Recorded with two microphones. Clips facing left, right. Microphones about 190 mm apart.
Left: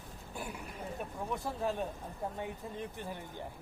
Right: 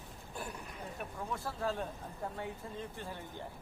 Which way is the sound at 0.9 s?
15° left (ahead or behind).